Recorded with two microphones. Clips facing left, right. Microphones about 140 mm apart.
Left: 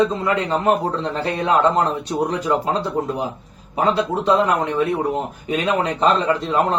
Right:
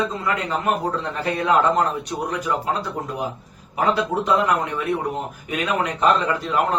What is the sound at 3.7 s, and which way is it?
Speech, 30° left (ahead or behind).